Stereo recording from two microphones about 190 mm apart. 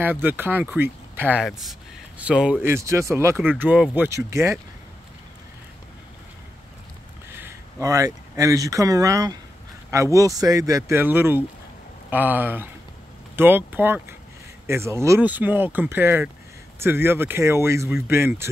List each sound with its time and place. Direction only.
0.0 s speech: 10° right (ahead or behind)
7.2 s speech: 10° right (ahead or behind)